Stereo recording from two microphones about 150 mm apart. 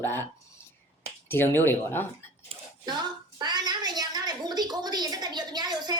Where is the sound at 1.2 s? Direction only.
15° left (ahead or behind).